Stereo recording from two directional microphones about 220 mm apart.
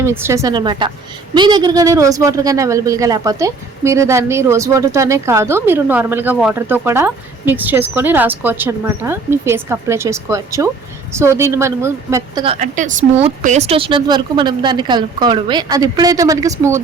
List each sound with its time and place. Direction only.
0.0 s speech: 10° right (ahead or behind)
12.5 s a woman's voice: 35° right (ahead or behind); by 16.8 s 15° right (ahead or behind)